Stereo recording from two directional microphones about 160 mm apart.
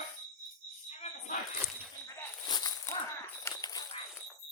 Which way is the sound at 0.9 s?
40° left (ahead or behind).